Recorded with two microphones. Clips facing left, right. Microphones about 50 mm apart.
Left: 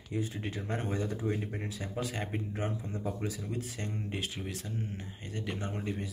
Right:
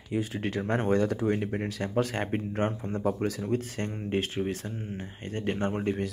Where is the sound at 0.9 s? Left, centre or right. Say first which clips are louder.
Right 8 dB; right.